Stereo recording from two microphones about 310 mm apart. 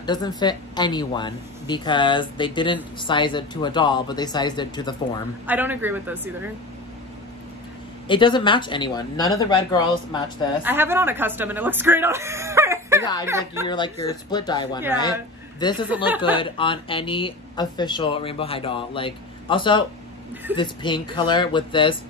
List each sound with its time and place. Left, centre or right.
0.0 s speech: centre
5.5 s a man's voice: centre
8.1 s speech: centre
10.6 s speech: centre
13.7 s speech: centre